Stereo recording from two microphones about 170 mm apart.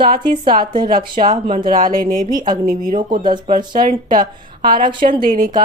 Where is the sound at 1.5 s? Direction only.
55° right (ahead or behind).